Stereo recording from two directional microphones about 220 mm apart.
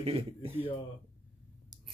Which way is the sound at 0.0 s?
25° right (ahead or behind).